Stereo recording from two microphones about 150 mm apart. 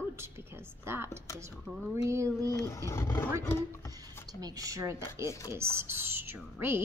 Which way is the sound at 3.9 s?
25° right (ahead or behind).